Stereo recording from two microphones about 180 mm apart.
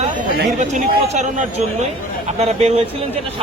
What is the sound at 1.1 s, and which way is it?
Speech, 40° right (ahead or behind).